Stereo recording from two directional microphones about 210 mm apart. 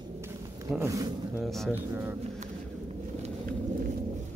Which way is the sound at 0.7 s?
15° right (ahead or behind).